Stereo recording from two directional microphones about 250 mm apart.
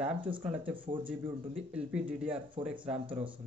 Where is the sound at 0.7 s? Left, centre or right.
Centre.